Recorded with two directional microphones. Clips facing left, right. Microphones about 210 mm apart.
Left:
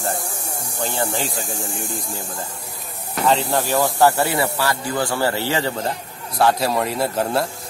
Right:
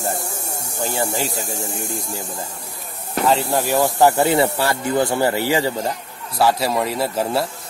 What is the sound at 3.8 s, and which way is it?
Speech, 20° right (ahead or behind).